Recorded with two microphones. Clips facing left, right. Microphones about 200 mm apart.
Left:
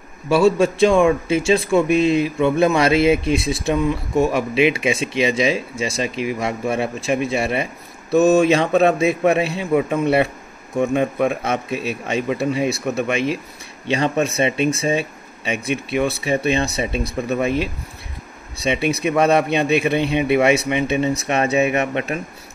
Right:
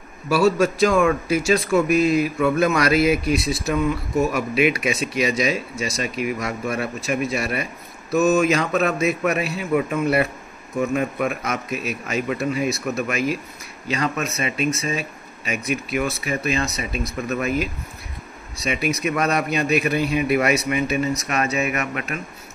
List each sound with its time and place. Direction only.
0.6 s speech: 30° left (ahead or behind)